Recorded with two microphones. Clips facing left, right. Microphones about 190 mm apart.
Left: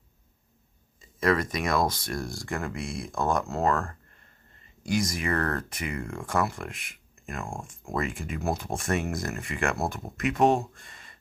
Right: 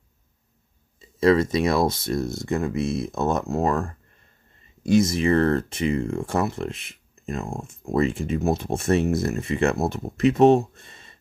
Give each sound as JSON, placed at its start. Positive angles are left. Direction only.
{"t": 1.2, "sound": "speech", "side_deg": -25}